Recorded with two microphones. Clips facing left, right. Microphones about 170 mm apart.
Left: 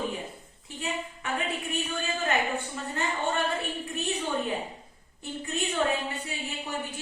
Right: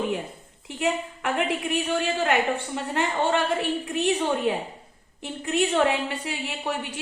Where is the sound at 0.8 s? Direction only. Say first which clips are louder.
Right 8 dB; 90° right.